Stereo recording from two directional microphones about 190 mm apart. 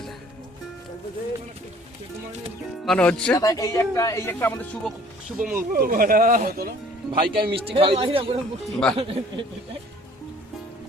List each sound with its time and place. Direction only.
2.8 s speech: 5° left (ahead or behind)
3.3 s speech: 20° left (ahead or behind); by 5.6 s 5° right (ahead or behind)
5.7 s speech: 50° right (ahead or behind)
7.1 s speech: 25° right (ahead or behind)
8.6 s speech: 5° left (ahead or behind)
9.0 s speech: 30° right (ahead or behind)